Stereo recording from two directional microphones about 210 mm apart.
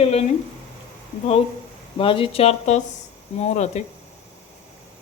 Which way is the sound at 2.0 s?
25° left (ahead or behind).